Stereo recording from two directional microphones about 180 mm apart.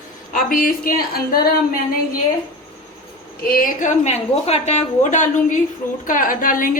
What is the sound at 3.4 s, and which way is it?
A woman's voice, 50° left (ahead or behind).